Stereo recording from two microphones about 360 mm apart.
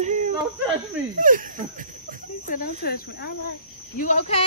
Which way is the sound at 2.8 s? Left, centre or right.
Left.